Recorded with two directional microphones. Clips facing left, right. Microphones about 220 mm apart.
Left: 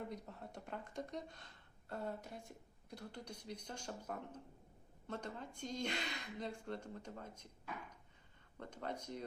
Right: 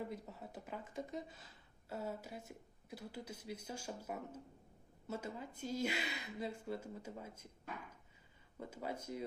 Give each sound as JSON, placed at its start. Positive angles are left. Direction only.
{"t": 0.0, "sound": "a woman's voice", "side_deg": -5}
{"t": 8.5, "sound": "a woman's voice", "side_deg": -5}